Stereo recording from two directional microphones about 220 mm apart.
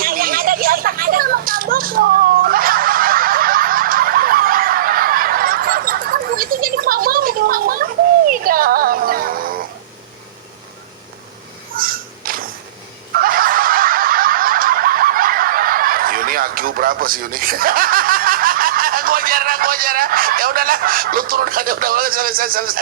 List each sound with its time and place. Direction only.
0.0 s children playing: 40° right (ahead or behind)
8.3 s music: 40° right (ahead or behind)
11.8 s a sound: 40° right (ahead or behind)